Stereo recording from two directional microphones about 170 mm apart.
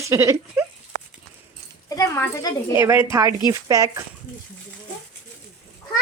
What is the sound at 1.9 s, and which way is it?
Speech, 20° left (ahead or behind).